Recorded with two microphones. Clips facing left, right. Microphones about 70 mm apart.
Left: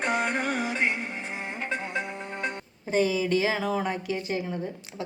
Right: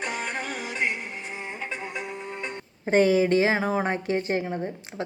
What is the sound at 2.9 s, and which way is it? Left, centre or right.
A woman's voice, right.